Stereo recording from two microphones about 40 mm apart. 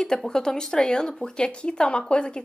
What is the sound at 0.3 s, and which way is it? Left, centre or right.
Speech, centre.